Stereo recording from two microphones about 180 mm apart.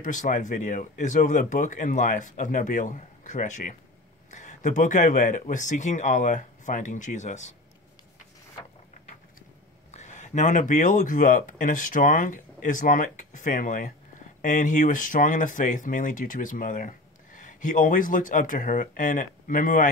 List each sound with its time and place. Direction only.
0.0 s speech: 45° left (ahead or behind)
9.8 s speech: 40° left (ahead or behind)